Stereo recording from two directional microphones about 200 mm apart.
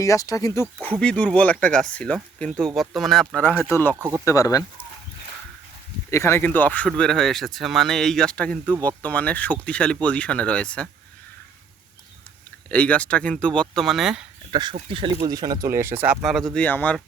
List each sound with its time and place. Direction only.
0.0 s speech: 15° left (ahead or behind)
0.8 s speech: 5° left (ahead or behind)
3.9 s speech: 10° right (ahead or behind)
4.3 s speech: 15° left (ahead or behind)
6.1 s speech: 15° left (ahead or behind)
12.6 s speech: 5° left (ahead or behind)
14.5 s speech: 20° right (ahead or behind); by 17.0 s 10° left (ahead or behind)